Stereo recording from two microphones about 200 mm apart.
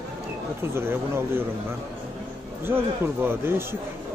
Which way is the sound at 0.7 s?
10° right (ahead or behind).